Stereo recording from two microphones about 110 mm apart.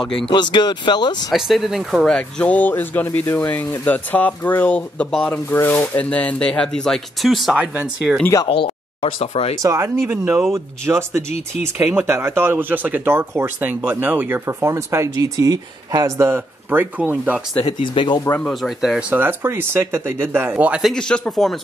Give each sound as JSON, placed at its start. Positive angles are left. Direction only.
{"t": 0.0, "sound": "speech", "side_deg": 5}
{"t": 0.3, "sound": "speech", "side_deg": 45}
{"t": 1.3, "sound": "speech", "side_deg": 0}
{"t": 2.1, "sound": "speech", "side_deg": 10}
{"t": 8.2, "sound": "speech", "side_deg": 25}
{"t": 8.5, "sound": "speech", "side_deg": 55}
{"t": 9.3, "sound": "speech", "side_deg": 70}
{"t": 9.6, "sound": "speech", "side_deg": -30}
{"t": 17.6, "sound": "speech", "side_deg": 45}
{"t": 18.4, "sound": "speech", "side_deg": 0}
{"t": 19.1, "sound": "speech", "side_deg": -20}
{"t": 20.9, "sound": "speech", "side_deg": 5}